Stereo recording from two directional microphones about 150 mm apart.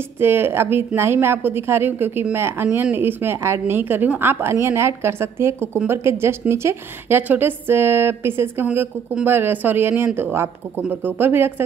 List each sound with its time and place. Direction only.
0.2 s a woman's voice: 15° right (ahead or behind)